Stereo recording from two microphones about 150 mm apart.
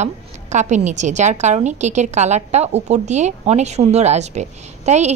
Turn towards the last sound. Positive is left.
turn(degrees=-50)  # may be behind; listen again after turning